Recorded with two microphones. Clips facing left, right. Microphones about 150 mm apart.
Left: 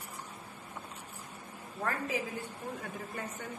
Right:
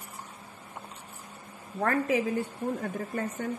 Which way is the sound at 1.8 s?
60° right (ahead or behind).